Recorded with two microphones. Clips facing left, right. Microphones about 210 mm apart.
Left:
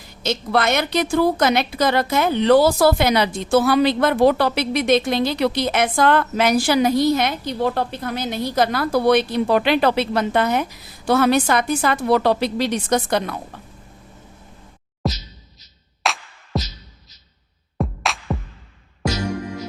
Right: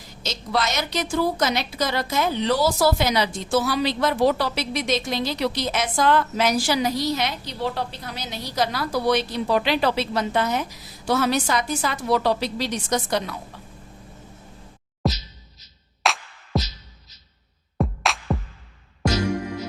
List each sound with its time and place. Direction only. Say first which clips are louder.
0.2 s a woman's voice: left 5 dB; 60° left (ahead or behind)
15.0 s a sound: even; centre (ahead or behind)
16.0 s music: even; centre (ahead or behind)
17.7 s music: even; centre (ahead or behind)